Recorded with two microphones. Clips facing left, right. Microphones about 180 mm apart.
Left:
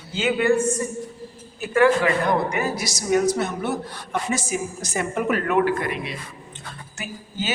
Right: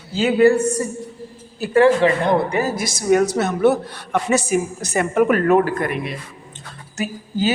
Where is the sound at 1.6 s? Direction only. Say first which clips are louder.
Right 4 dB; 30° right (ahead or behind).